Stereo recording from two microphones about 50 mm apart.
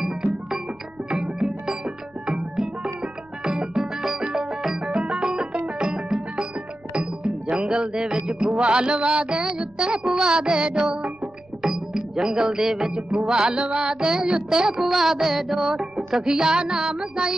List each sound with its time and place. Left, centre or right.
1.1 s music: centre